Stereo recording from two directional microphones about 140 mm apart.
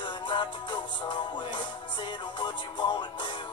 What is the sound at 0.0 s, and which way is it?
Music, 35° left (ahead or behind).